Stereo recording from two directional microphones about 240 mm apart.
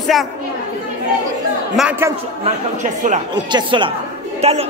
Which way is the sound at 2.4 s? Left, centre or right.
Right.